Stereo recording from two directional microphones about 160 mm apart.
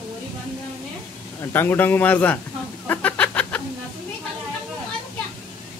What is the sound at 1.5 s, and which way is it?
Speech, 15° left (ahead or behind).